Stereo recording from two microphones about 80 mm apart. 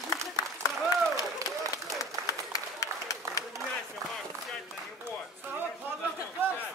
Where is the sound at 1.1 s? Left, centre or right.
Left.